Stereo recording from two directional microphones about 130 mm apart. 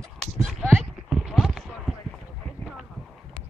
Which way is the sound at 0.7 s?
15° right (ahead or behind).